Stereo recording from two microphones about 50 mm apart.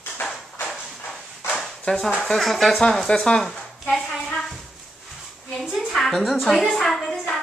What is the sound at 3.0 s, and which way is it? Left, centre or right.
Speech, centre.